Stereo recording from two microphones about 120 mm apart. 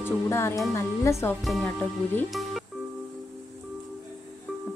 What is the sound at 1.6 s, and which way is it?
Speech, 10° left (ahead or behind).